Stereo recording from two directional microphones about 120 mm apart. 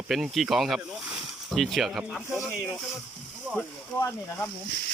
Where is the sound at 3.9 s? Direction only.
20° left (ahead or behind).